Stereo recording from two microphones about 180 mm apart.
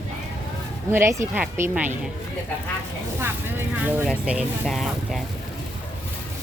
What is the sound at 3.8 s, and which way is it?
Speech, 5° right (ahead or behind).